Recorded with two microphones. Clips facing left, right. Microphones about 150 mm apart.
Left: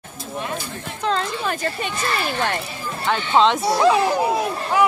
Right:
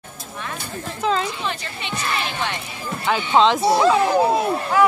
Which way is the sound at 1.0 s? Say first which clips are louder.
Right 1 dB; 5° right (ahead or behind).